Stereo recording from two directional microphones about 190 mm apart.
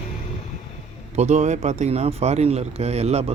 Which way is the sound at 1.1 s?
35° right (ahead or behind).